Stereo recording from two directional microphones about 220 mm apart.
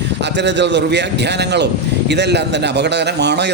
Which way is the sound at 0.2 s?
50° right (ahead or behind).